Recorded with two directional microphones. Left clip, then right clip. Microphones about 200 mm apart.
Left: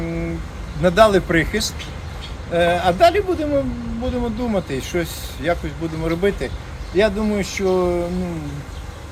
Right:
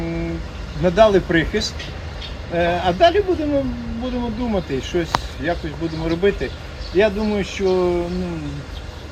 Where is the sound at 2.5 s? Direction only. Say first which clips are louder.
Left 2 dB; 10° left (ahead or behind).